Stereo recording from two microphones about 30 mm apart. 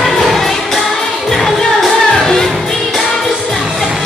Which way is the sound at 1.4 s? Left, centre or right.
Centre.